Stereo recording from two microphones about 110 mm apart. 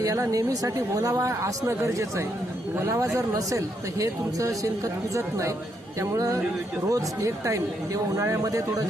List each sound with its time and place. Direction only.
0.0 s a woman's voice: 30° right (ahead or behind)